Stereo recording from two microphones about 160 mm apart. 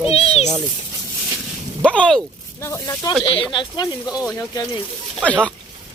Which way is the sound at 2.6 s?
20° left (ahead or behind).